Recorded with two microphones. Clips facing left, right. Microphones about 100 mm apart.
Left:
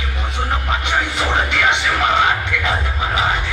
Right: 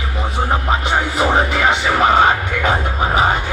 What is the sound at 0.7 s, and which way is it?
Music, 35° right (ahead or behind).